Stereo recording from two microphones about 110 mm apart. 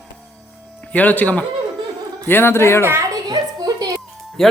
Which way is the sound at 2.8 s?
25° right (ahead or behind).